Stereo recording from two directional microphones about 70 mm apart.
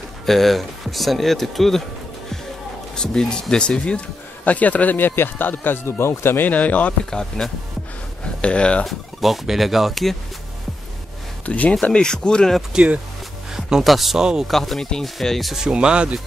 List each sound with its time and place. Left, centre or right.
0.3 s speech: centre
3.0 s speech: centre
7.1 s speech: centre
8.8 s speech: centre
11.4 s speech: left
11.8 s speech: centre
12.7 s speech: centre
14.5 s speech: centre